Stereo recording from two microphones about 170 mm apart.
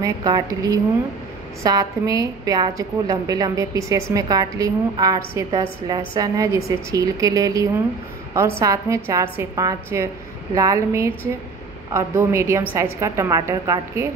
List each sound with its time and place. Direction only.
0.0 s a woman's voice: 20° right (ahead or behind)